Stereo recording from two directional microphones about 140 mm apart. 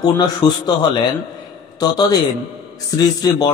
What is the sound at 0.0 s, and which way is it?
Speech, 30° left (ahead or behind).